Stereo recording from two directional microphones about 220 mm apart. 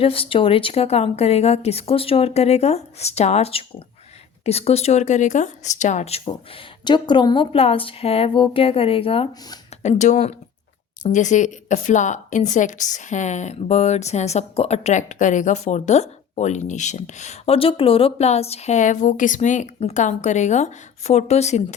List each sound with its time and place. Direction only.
0.0 s speech: 25° left (ahead or behind)